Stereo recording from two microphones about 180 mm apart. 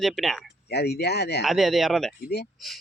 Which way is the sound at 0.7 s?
65° left (ahead or behind).